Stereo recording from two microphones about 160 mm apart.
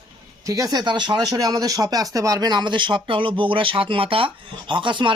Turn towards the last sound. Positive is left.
turn(degrees=-30)  # may be behind; listen again after turning